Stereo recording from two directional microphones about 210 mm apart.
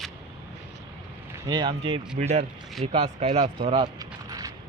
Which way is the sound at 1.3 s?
20° right (ahead or behind).